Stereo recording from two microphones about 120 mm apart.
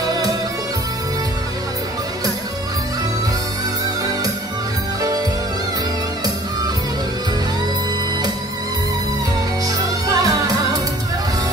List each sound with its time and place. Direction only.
9.7 s music: 30° right (ahead or behind)